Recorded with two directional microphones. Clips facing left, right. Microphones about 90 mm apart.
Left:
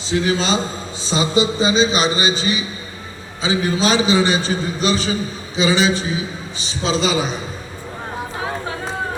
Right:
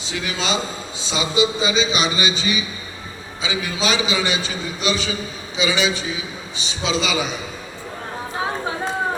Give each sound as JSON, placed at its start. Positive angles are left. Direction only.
{"t": 0.0, "sound": "a man's voice", "side_deg": 35}